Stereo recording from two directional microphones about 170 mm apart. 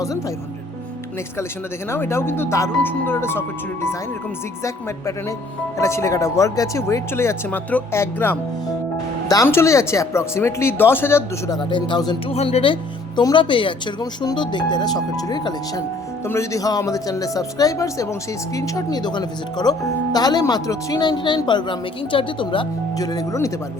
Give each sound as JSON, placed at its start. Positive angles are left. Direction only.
{"t": 1.9, "sound": "speech", "side_deg": 15}
{"t": 5.7, "sound": "speech", "side_deg": 15}
{"t": 11.7, "sound": "speech", "side_deg": 25}
{"t": 12.3, "sound": "speech", "side_deg": 35}